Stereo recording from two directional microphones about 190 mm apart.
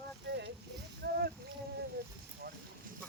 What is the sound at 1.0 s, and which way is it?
Rowboat, 60° right (ahead or behind).